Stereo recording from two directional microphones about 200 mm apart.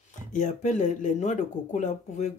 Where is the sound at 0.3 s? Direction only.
40° left (ahead or behind).